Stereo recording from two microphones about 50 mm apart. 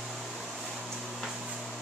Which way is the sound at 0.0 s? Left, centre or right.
Centre.